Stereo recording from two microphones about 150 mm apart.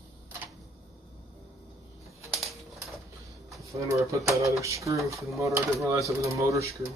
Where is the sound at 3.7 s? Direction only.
20° right (ahead or behind).